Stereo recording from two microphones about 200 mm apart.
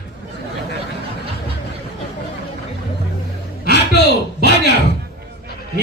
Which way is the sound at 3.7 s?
55° left (ahead or behind).